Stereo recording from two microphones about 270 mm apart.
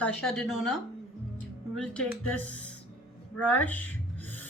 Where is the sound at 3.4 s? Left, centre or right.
Centre.